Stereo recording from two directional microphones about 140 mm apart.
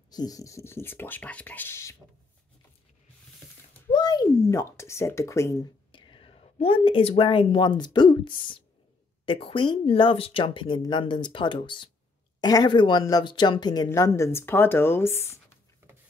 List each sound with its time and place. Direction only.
0.1 s speech: 25° left (ahead or behind)
3.9 s speech: 30° left (ahead or behind)
5.9 s speech: 35° left (ahead or behind); by 15.6 s 20° left (ahead or behind)